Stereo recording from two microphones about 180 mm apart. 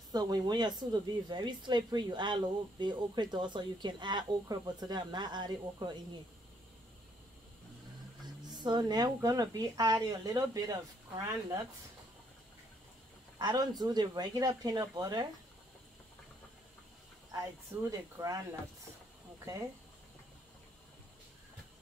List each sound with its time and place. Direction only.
0.1 s speech: 20° right (ahead or behind)
8.6 s speech: 25° right (ahead or behind)
13.4 s speech: 25° right (ahead or behind)
17.8 s speech: 20° right (ahead or behind)